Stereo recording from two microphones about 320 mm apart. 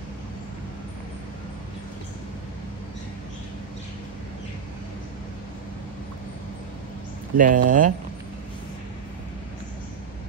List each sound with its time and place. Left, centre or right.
7.3 s speech: right